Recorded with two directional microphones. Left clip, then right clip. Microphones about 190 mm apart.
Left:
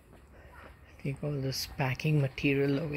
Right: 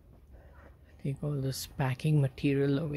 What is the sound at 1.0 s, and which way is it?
Speech, 20° right (ahead or behind).